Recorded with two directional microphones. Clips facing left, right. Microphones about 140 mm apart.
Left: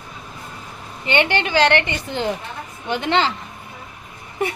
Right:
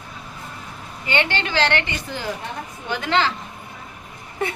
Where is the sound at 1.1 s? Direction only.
20° left (ahead or behind).